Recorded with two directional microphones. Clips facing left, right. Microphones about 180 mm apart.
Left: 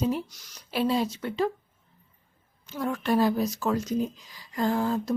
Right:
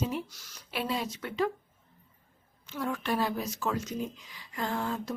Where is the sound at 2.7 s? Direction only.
40° left (ahead or behind).